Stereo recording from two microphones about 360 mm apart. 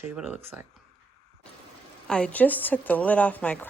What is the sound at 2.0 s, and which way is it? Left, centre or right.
A woman's voice, centre.